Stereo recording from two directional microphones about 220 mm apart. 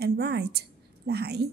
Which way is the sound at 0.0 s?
45° right (ahead or behind).